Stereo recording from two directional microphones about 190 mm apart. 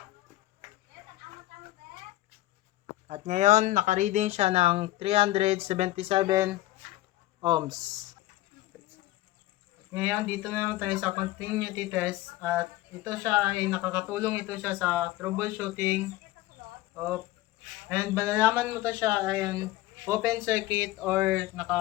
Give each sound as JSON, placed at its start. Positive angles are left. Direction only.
{"t": 3.1, "sound": "speech", "side_deg": -40}
{"t": 7.4, "sound": "speech", "side_deg": -20}
{"t": 9.9, "sound": "speech", "side_deg": -10}